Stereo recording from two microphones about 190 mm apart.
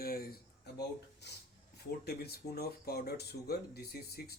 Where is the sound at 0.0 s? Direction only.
50° left (ahead or behind).